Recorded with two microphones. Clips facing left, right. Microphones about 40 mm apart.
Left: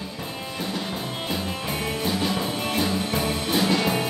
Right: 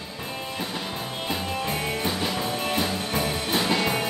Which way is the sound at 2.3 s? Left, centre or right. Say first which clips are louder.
Left 1 dB; centre.